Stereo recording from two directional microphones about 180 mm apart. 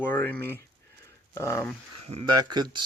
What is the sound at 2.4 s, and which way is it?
Speech, 25° right (ahead or behind).